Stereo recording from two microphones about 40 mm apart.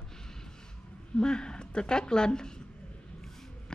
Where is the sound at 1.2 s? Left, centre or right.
Left.